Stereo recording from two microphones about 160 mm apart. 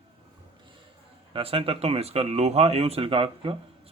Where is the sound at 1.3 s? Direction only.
35° right (ahead or behind).